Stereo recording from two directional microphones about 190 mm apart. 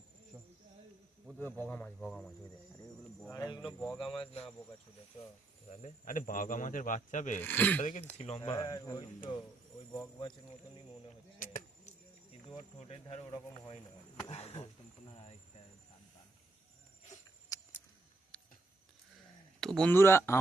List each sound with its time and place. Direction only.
0.3 s cricket: 10° right (ahead or behind)
1.4 s speech: 10° left (ahead or behind)
3.2 s speech: 15° left (ahead or behind)
4.0 s speech: 25° left (ahead or behind)
5.6 s speech: 40° left (ahead or behind)
7.4 s speech: 10° left (ahead or behind)
7.8 s chop: 40° left (ahead or behind)
8.4 s speech: 20° left (ahead or behind)
11.3 s a sound: 45° left (ahead or behind)
12.5 s chop: 35° left (ahead or behind)
14.3 s chop: 35° left (ahead or behind)
17.5 s keys jangling: 20° left (ahead or behind)
18.3 s a sound: 5° left (ahead or behind)
19.5 s speech: centre (ahead or behind)